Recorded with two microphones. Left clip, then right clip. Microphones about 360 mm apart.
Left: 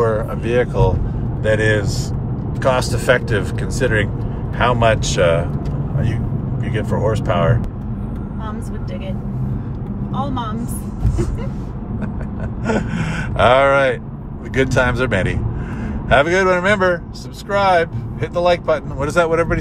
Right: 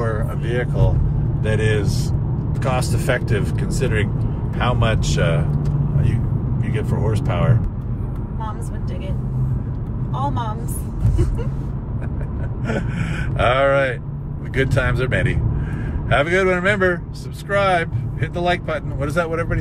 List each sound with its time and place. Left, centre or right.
0.0 s vehicle: centre
1.4 s speech: centre
6.6 s speech: centre
12.6 s speech: centre